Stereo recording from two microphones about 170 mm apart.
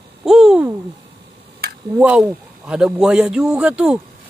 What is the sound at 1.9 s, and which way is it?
A man's voice, 10° right (ahead or behind).